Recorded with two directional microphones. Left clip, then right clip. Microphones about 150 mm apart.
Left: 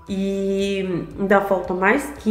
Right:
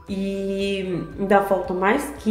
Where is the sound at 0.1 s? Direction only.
15° left (ahead or behind).